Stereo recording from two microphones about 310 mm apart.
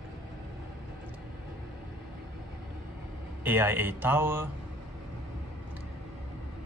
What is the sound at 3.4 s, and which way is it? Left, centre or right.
Speech, centre.